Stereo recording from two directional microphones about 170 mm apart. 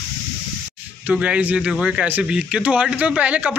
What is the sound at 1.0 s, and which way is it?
A man's voice, 5° right (ahead or behind).